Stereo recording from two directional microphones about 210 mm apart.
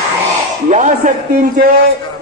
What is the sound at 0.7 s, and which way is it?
Speech, 35° right (ahead or behind).